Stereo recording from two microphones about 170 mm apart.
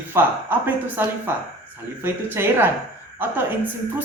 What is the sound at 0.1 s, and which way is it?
A man's voice, 10° right (ahead or behind).